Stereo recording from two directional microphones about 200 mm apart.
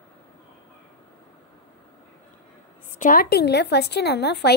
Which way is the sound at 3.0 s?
45° left (ahead or behind).